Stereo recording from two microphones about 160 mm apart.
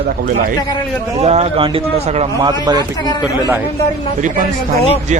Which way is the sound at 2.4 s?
25° right (ahead or behind).